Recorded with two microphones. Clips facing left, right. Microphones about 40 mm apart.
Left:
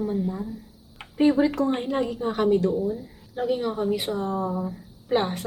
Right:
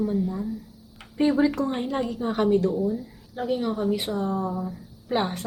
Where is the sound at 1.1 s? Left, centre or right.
Centre.